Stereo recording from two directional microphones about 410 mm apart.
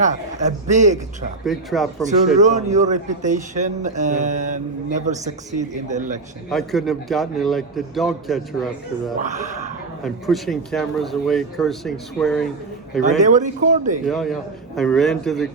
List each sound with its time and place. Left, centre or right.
0.0 s a man's voice: centre
1.5 s a man's voice: centre
2.4 s a man's voice: centre
6.5 s a man's voice: centre
13.1 s a man's voice: centre
14.0 s a man's voice: centre